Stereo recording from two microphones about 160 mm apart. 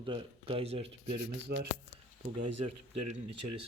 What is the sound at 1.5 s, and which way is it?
Speech, 90° right.